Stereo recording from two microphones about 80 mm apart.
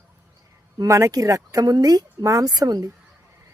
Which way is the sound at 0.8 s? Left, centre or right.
Right.